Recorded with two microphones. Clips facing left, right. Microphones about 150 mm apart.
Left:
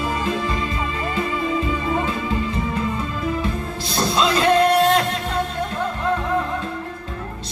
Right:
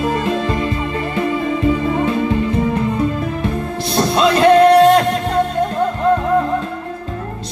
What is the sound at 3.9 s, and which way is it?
Music, 60° right (ahead or behind).